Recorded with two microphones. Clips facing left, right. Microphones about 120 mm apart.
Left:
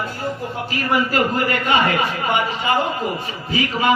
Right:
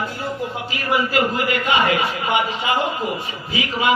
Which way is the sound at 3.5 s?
45° left (ahead or behind).